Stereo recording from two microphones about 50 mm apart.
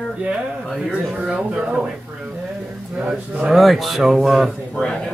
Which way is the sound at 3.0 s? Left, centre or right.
Right.